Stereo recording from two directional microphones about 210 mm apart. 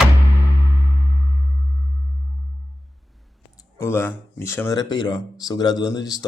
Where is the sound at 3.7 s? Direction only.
10° left (ahead or behind).